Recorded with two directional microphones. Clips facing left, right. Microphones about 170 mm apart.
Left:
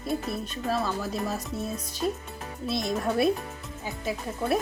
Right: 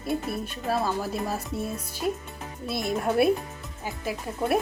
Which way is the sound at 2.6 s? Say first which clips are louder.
Even; 5° right (ahead or behind).